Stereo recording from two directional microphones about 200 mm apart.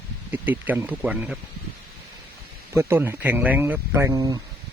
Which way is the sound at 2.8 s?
10° right (ahead or behind).